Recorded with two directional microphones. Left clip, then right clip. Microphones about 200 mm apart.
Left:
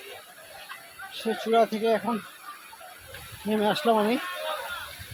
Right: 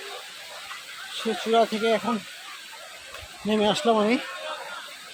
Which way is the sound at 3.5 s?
10° right (ahead or behind).